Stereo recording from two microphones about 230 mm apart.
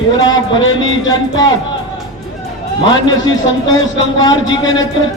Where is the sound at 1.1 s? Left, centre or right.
Centre.